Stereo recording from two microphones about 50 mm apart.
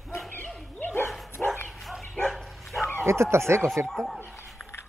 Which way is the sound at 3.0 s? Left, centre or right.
Right.